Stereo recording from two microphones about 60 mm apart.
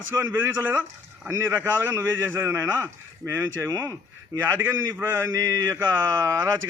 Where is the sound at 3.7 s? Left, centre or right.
Right.